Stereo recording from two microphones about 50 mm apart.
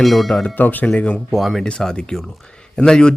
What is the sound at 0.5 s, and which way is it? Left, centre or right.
Speech, left.